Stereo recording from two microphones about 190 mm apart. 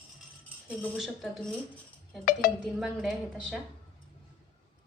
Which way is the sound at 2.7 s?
Centre (ahead or behind).